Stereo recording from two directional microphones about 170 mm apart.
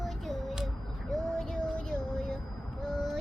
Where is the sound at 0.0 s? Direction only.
Centre (ahead or behind).